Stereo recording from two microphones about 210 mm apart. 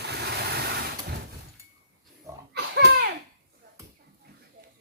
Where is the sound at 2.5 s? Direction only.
50° right (ahead or behind).